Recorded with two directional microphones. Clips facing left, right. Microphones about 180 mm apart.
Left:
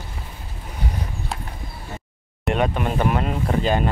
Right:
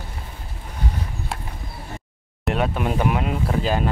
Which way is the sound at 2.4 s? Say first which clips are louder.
Left 1 dB; centre (ahead or behind).